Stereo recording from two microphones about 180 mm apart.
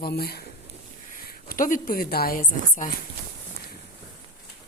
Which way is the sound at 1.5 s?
50° left (ahead or behind).